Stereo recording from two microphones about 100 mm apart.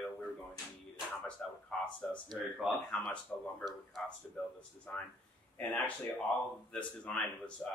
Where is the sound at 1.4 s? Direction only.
10° left (ahead or behind).